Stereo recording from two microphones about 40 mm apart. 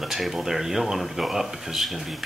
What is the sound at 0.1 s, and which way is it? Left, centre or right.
Speech, centre.